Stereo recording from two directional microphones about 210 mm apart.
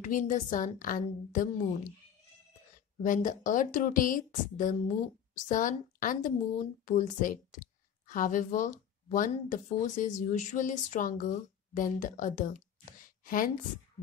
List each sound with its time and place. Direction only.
0.0 s a woman's voice: 35° left (ahead or behind)
3.0 s a woman's voice: 40° left (ahead or behind)